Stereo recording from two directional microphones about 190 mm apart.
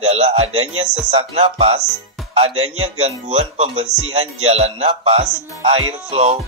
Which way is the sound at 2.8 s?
35° right (ahead or behind).